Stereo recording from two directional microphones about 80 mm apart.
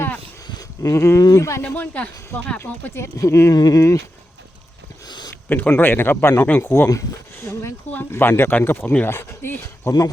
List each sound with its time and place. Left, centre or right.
0.8 s speech: left
1.6 s speech: centre
2.9 s speech: left
3.5 s speech: left
5.0 s a sound: left
5.5 s speech: left
7.3 s a sound: left
8.1 s speech: left